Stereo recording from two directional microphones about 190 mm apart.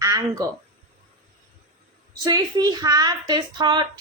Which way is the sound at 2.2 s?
20° right (ahead or behind).